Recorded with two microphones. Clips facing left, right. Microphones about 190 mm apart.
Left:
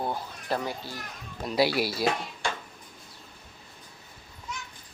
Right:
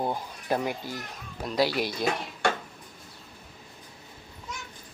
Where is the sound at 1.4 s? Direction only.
10° left (ahead or behind).